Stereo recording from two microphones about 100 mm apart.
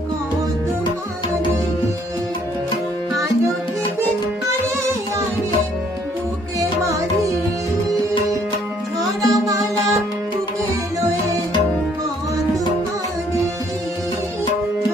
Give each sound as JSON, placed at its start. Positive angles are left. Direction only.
{"t": 6.6, "sound": "music", "side_deg": -30}
{"t": 9.0, "sound": "music", "side_deg": -35}